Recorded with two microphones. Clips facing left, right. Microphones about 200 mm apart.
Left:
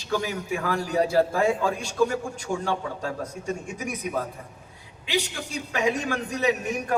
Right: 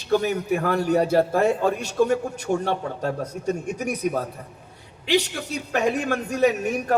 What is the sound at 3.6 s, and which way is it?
Speech, 65° right (ahead or behind).